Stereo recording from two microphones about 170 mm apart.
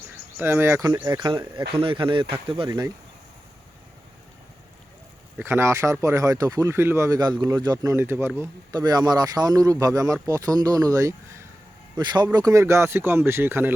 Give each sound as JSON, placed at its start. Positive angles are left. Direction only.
{"t": 0.3, "sound": "speech", "side_deg": -15}
{"t": 5.4, "sound": "speech", "side_deg": -15}